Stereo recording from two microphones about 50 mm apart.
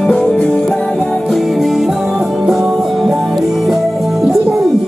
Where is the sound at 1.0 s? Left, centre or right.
Centre.